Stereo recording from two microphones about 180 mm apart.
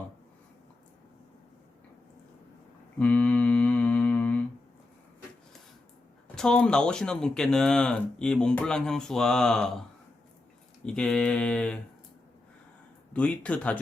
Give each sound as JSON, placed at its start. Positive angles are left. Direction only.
{"t": 3.0, "sound": "mantra", "side_deg": 10}
{"t": 6.2, "sound": "speech", "side_deg": 5}
{"t": 10.8, "sound": "speech", "side_deg": 5}
{"t": 13.1, "sound": "speech", "side_deg": 5}